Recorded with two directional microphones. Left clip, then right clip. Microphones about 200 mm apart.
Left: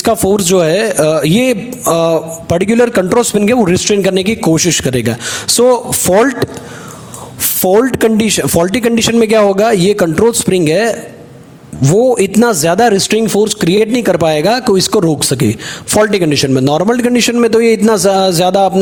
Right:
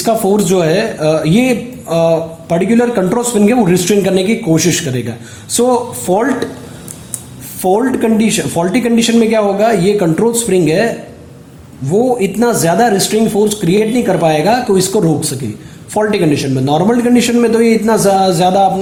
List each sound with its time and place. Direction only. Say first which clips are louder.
0.0 s a man's voice: left 1 dB; 45° left (ahead or behind)
7.6 s a man's voice: left 3 dB; 50° left (ahead or behind)